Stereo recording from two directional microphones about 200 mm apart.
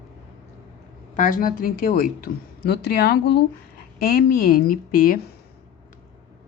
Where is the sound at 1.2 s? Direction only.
45° left (ahead or behind).